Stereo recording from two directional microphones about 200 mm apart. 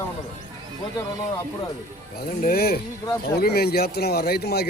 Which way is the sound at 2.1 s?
50° left (ahead or behind).